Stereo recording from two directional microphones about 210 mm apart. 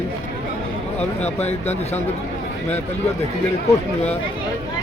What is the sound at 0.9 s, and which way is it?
Speech, 30° left (ahead or behind).